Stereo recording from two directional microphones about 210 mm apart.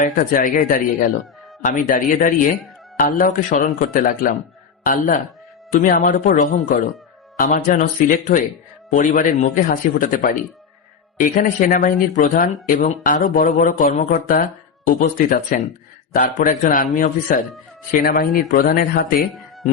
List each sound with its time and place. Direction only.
0.0 s a man's voice: 40° left (ahead or behind)
19.2 s speech: centre (ahead or behind)